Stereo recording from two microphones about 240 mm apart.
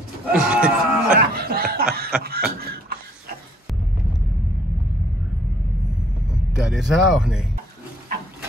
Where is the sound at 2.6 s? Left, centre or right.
Right.